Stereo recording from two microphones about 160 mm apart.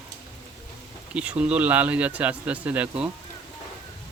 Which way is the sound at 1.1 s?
10° right (ahead or behind).